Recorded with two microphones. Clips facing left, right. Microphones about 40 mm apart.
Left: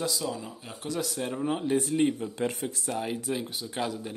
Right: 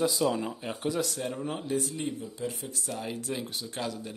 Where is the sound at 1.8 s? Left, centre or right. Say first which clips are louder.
Left 7 dB; left.